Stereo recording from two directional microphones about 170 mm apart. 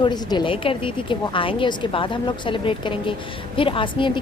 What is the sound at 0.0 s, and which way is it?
A woman's voice, 25° left (ahead or behind).